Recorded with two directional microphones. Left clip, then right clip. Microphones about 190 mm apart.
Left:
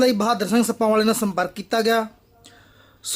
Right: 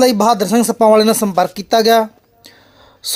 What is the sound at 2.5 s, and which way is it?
Whispering, 15° right (ahead or behind).